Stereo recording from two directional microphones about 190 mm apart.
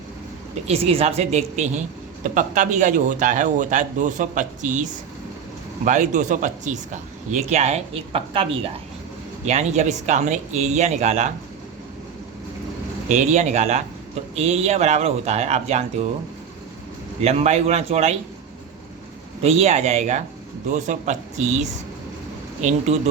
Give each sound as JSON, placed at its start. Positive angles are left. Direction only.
{"t": 0.7, "sound": "speech", "side_deg": -30}
{"t": 13.1, "sound": "speech", "side_deg": -40}
{"t": 17.2, "sound": "speech", "side_deg": -35}
{"t": 19.4, "sound": "speech", "side_deg": -35}